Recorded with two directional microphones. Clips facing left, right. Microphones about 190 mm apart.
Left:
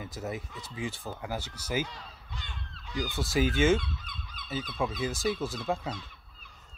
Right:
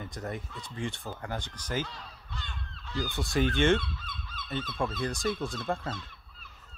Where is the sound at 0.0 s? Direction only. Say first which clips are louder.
Left 1 dB; 5° left (ahead or behind).